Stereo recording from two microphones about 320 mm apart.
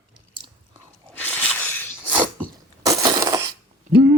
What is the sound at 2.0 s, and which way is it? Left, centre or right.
Sneeze, centre.